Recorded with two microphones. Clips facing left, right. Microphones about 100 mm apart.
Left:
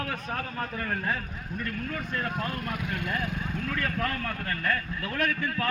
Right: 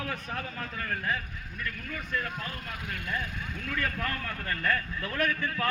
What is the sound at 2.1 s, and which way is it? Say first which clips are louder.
Speech: left 2 dB; 40° left (ahead or behind).